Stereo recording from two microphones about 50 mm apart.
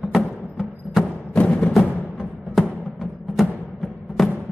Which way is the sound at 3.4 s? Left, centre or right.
Centre.